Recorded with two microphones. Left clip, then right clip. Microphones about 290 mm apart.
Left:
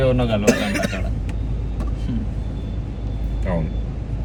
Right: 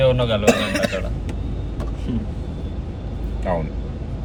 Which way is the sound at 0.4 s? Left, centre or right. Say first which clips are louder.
Right 2 dB; centre.